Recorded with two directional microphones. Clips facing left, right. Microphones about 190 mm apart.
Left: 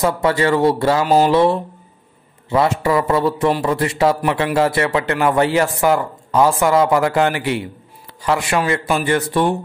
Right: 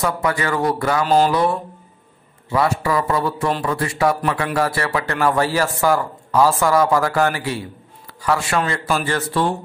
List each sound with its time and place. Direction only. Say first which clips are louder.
0.0 s speech: left 5 dB; 25° left (ahead or behind)